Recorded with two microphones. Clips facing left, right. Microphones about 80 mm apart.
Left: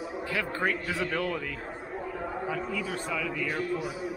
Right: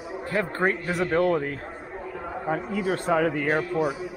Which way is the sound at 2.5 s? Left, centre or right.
Right.